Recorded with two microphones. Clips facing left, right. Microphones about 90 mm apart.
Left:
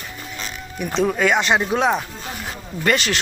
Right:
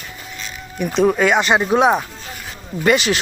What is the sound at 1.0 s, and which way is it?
Speech, 10° right (ahead or behind).